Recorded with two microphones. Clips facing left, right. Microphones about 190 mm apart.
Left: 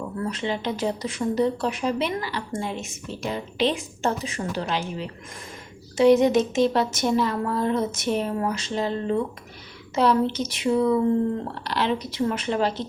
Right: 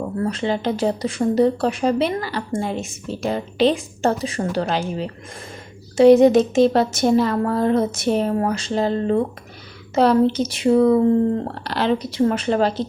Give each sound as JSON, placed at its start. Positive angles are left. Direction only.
{"t": 0.0, "sound": "speech", "side_deg": -35}
{"t": 8.3, "sound": "speech", "side_deg": -45}